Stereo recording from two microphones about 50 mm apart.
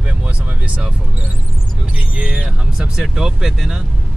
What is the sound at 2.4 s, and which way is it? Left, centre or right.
Speech, centre.